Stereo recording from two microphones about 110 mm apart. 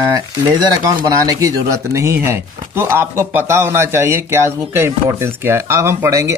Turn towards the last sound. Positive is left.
turn(degrees=-25)  # may be behind; listen again after turning